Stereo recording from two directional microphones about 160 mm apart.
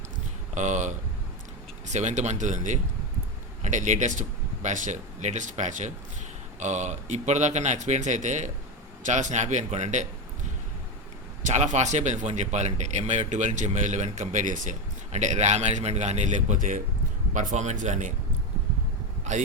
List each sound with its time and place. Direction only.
0.5 s speech: 50° right (ahead or behind)
11.4 s speech: 45° right (ahead or behind)